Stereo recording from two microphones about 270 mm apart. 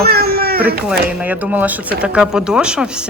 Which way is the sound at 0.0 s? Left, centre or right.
Right.